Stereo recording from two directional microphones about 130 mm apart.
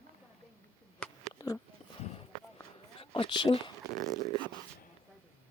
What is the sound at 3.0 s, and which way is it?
Speech, 40° left (ahead or behind).